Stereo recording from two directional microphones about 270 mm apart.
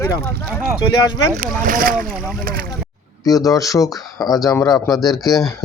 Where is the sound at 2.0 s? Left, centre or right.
Centre.